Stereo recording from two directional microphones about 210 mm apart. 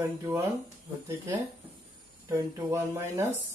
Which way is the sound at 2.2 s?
15° right (ahead or behind).